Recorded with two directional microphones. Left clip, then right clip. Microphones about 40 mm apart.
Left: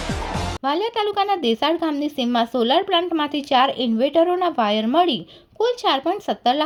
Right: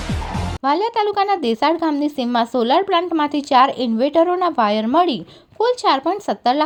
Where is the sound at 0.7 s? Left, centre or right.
Right.